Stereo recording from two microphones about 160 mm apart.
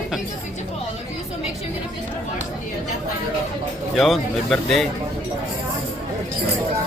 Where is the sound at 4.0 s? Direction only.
Centre (ahead or behind).